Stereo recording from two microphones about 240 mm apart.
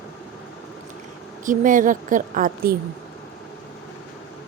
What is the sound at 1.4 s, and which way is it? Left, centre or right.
Speech, right.